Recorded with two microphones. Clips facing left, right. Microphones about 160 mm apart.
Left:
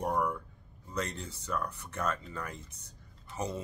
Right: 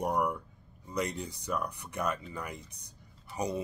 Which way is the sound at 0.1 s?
15° right (ahead or behind).